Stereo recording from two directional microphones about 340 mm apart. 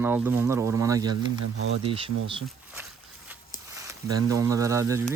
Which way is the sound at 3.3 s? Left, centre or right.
Centre.